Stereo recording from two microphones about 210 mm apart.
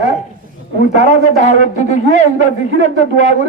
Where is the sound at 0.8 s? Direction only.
35° left (ahead or behind).